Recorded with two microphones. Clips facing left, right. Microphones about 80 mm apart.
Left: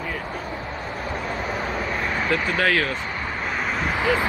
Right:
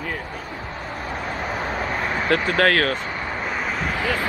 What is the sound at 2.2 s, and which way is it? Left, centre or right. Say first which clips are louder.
Speech: right 4 dB; right.